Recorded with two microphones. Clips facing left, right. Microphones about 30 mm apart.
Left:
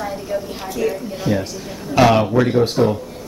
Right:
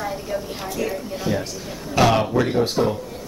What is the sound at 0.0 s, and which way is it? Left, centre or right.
A woman's voice, centre.